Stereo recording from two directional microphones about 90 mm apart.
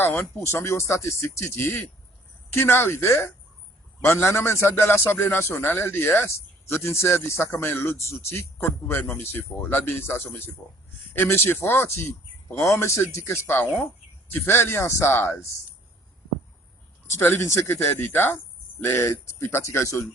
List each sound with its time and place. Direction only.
0.0 s a man's voice: 20° left (ahead or behind)
17.1 s a man's voice: 30° left (ahead or behind)